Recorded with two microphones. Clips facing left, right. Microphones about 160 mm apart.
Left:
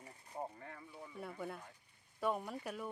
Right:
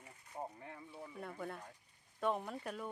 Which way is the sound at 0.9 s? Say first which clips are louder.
Even; 5° right (ahead or behind).